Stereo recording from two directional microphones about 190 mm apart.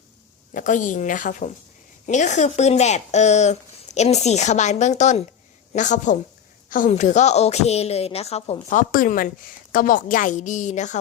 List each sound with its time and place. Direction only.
0.5 s a woman's voice: 40° left (ahead or behind)